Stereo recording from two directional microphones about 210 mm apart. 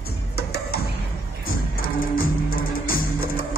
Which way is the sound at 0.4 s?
50° left (ahead or behind).